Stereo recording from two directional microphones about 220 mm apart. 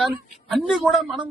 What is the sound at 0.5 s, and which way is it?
Speech, centre (ahead or behind).